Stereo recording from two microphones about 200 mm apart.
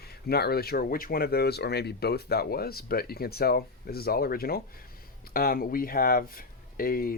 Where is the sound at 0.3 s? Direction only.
50° left (ahead or behind).